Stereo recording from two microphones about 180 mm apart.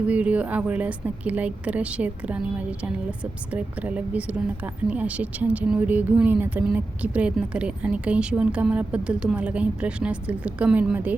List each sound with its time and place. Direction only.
0.1 s a woman's voice: 10° right (ahead or behind)